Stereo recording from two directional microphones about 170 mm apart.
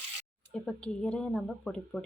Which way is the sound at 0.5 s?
5° left (ahead or behind).